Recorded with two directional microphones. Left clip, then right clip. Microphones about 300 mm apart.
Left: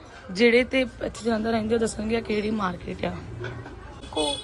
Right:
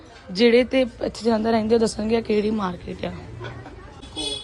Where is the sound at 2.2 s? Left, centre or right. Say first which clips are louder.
Right 5 dB; right.